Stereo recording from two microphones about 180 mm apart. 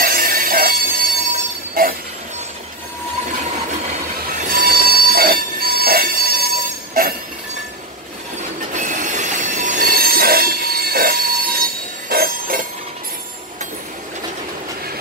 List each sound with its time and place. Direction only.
0.0 s train: 50° right (ahead or behind)
4.5 s train: 55° right (ahead or behind)
8.5 s train wheels squealing: 45° right (ahead or behind)